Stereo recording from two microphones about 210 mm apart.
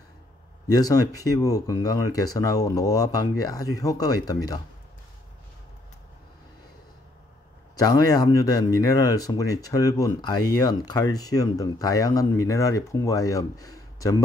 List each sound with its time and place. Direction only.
0.7 s speech: 15° left (ahead or behind)
7.7 s speech: 15° left (ahead or behind)